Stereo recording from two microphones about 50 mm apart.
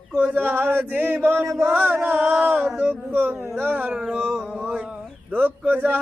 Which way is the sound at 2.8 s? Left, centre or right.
Right.